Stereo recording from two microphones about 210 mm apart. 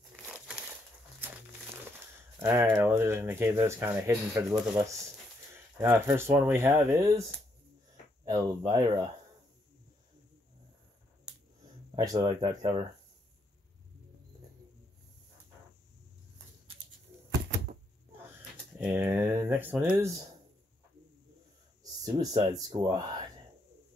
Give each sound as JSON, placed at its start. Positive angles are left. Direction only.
{"t": 0.1, "sound": "crumpling", "side_deg": -5}
{"t": 2.4, "sound": "speech", "side_deg": -10}
{"t": 8.3, "sound": "speech", "side_deg": -15}
{"t": 11.9, "sound": "speech", "side_deg": -20}
{"t": 18.8, "sound": "speech", "side_deg": -10}
{"t": 22.0, "sound": "speech", "side_deg": -15}